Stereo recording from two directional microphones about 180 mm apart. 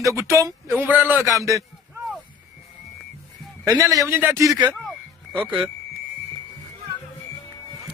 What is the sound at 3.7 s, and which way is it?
Speech, 20° right (ahead or behind).